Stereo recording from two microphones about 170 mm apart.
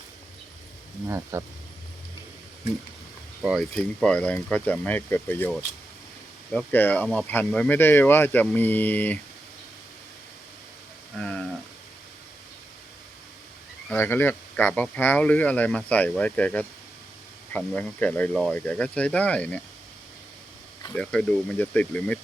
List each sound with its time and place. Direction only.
1.0 s speech: 15° right (ahead or behind)
3.4 s speech: 5° right (ahead or behind)
3.8 s speech: 5° left (ahead or behind)
6.5 s speech: 5° left (ahead or behind)
11.2 s speech: 5° left (ahead or behind)
13.9 s speech: 10° left (ahead or behind)
20.9 s speech: 5° left (ahead or behind)